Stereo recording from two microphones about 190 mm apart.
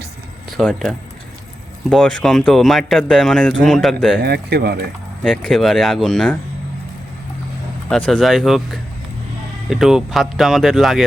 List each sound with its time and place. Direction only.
0.5 s speech: centre (ahead or behind)
4.2 s speech: 60° right (ahead or behind)
5.2 s speech: centre (ahead or behind)
7.9 s speech: 5° left (ahead or behind)